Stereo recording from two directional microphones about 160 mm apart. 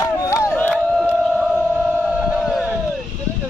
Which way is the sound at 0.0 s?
20° left (ahead or behind).